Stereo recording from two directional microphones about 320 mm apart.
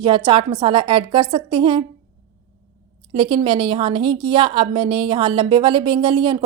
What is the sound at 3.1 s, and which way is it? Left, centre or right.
A woman's voice, centre.